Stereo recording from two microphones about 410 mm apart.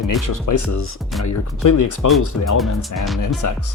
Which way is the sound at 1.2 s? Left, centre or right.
Left.